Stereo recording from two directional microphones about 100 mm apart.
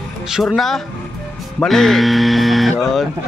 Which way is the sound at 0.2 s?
5° right (ahead or behind).